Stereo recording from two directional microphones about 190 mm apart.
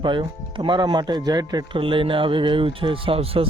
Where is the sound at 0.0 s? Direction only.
25° right (ahead or behind).